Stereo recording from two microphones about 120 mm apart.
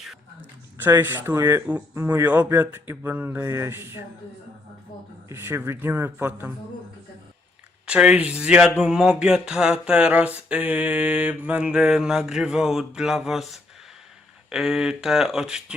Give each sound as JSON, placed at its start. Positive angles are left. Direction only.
{"t": 1.0, "sound": "speech", "side_deg": -20}
{"t": 5.3, "sound": "speech", "side_deg": -20}
{"t": 7.9, "sound": "a sound", "side_deg": -10}
{"t": 14.5, "sound": "speech", "side_deg": 0}